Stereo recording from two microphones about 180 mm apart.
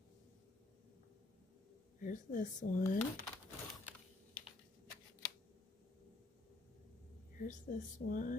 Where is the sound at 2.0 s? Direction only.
45° left (ahead or behind).